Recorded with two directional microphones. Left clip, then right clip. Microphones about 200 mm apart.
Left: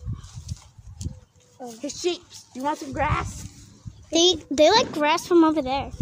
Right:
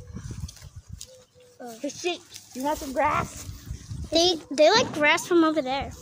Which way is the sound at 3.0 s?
60° left (ahead or behind).